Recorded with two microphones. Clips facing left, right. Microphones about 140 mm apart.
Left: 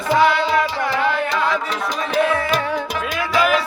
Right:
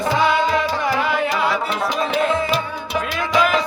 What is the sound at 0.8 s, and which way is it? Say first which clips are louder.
Music: even; 10° right (ahead or behind).